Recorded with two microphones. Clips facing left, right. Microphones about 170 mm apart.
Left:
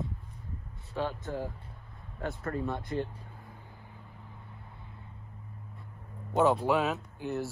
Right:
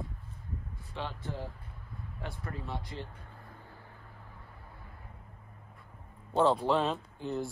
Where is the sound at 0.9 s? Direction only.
45° left (ahead or behind).